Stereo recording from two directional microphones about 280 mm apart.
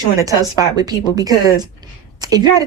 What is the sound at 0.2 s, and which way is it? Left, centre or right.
A woman's voice, centre.